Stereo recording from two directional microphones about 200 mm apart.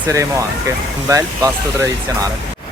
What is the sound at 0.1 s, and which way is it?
Speech, 15° right (ahead or behind).